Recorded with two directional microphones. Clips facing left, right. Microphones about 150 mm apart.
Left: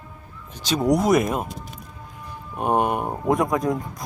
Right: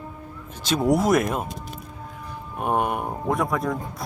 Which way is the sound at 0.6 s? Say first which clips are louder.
Left 1 dB; centre (ahead or behind).